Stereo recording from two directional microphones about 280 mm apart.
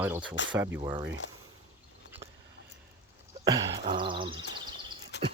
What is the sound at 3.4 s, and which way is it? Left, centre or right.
Speech, centre.